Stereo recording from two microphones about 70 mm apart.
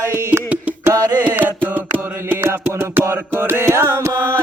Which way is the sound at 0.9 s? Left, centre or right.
Right.